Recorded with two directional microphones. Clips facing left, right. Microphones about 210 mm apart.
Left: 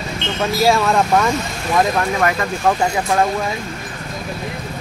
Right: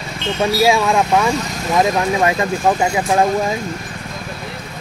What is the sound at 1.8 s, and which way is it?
Speech, 20° right (ahead or behind).